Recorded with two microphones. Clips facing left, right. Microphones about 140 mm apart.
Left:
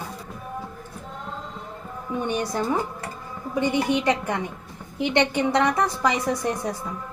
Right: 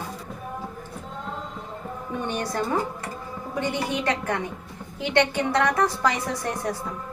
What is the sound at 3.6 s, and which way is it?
A woman's voice, 15° left (ahead or behind).